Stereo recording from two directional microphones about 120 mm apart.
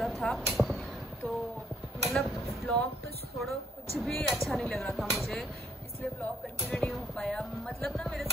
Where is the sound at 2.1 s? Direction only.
5° left (ahead or behind).